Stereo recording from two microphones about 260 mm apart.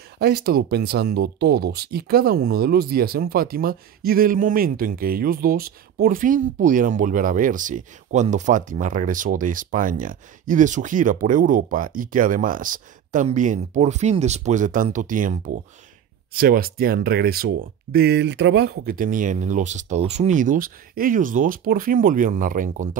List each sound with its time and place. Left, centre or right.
0.2 s speech: right